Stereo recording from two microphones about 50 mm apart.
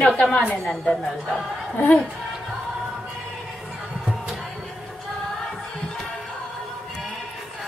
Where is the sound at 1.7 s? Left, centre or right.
Left.